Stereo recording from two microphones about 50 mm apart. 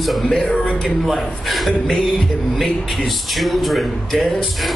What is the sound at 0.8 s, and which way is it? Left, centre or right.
Music, centre.